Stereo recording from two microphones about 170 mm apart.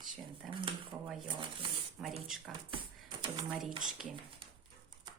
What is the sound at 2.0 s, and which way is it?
Speech, centre (ahead or behind).